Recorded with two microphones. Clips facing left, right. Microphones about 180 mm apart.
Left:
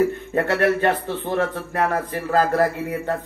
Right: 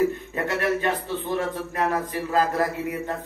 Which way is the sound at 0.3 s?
55° left (ahead or behind).